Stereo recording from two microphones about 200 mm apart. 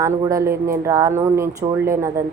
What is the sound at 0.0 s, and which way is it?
A woman's voice, 15° right (ahead or behind).